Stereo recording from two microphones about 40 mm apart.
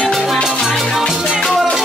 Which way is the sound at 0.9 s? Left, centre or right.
Centre.